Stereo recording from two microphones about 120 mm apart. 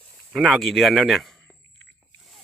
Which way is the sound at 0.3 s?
Centre (ahead or behind).